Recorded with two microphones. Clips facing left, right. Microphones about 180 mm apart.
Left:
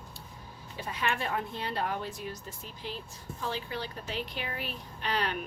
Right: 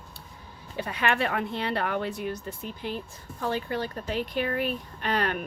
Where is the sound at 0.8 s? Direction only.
65° right (ahead or behind).